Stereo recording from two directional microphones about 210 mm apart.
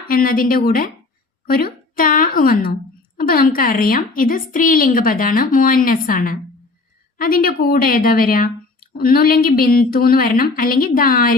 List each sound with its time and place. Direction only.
0.1 s a woman's voice: 45° left (ahead or behind)
1.5 s a sound: 45° left (ahead or behind)
3.2 s a woman's voice: 45° left (ahead or behind)